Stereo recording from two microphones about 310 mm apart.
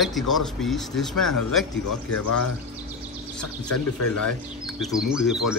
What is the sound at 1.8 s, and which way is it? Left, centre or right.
Speech, left.